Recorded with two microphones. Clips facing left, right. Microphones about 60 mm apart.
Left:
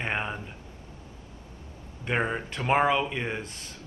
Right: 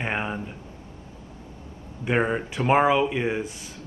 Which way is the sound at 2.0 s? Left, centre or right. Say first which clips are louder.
Right 4 dB; centre.